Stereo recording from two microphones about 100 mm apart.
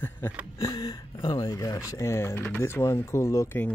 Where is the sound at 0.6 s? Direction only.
40° left (ahead or behind).